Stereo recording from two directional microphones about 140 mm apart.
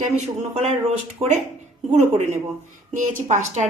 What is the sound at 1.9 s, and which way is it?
A woman's voice, 60° right (ahead or behind).